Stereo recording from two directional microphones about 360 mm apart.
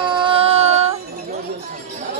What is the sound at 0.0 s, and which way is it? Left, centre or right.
Music, centre.